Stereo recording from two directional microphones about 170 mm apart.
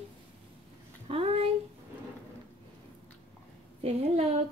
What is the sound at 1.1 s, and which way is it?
Speech, 35° right (ahead or behind).